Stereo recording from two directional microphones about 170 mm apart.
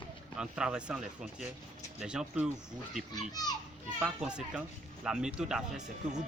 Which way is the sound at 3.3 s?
25° left (ahead or behind).